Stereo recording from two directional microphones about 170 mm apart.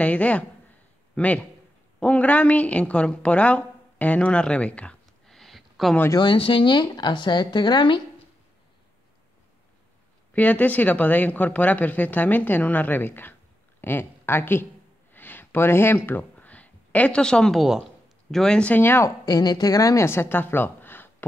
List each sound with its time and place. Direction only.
0.0 s a man's voice: 10° left (ahead or behind)
5.9 s a woman's voice: 20° left (ahead or behind)
10.3 s speech: 10° left (ahead or behind)